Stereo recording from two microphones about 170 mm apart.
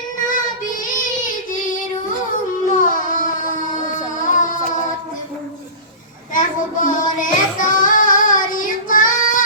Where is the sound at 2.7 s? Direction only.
50° left (ahead or behind).